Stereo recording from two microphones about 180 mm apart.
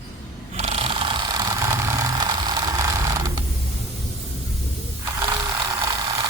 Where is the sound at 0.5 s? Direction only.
35° right (ahead or behind); by 3.4 s 20° right (ahead or behind).